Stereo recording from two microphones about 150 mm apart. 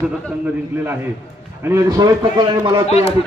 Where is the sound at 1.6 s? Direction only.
20° right (ahead or behind).